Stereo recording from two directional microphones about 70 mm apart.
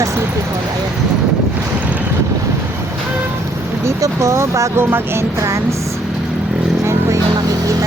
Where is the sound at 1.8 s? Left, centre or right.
Right.